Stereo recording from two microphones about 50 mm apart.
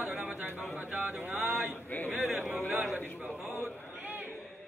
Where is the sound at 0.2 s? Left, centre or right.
Right.